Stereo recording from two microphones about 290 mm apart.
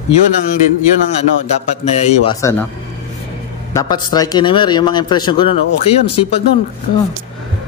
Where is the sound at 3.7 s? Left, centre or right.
Centre.